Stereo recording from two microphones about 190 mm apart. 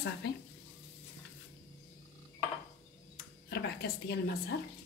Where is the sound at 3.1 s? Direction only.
60° left (ahead or behind).